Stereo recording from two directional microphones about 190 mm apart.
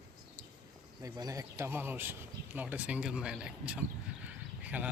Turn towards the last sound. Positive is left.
turn(degrees=-10)  # may be behind; listen again after turning